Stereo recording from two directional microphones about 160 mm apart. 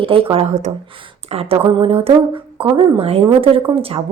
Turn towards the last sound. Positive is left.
turn(degrees=-35)  # may be behind; listen again after turning